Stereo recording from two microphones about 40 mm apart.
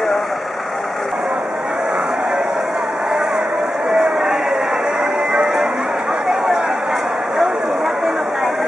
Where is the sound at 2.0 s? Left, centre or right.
Centre.